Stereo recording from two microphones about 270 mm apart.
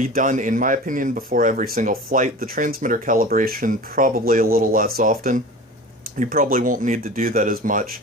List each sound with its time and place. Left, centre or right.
0.0 s speech: right